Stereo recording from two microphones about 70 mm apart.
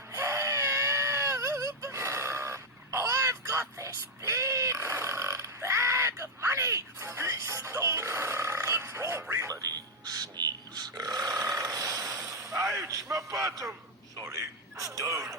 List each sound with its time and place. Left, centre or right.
0.1 s baby cry: right
5.6 s a sound: right
9.5 s music: right
10.2 s burping: right
12.9 s a sound: right
13.4 s a man's voice: right